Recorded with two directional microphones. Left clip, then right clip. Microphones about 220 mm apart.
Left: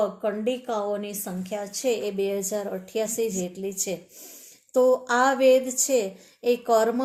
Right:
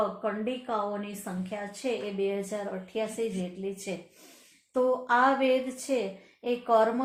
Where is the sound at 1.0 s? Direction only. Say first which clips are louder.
Left 4 dB; 50° left (ahead or behind).